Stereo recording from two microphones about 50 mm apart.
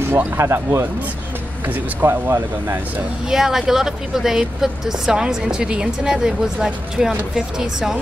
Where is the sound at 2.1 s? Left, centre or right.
Right.